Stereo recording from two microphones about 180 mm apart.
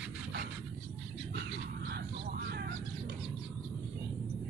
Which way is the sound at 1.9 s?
60° right (ahead or behind).